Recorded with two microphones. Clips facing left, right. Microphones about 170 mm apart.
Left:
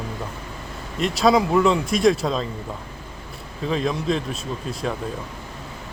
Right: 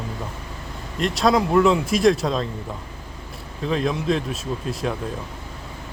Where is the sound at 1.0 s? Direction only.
Centre (ahead or behind).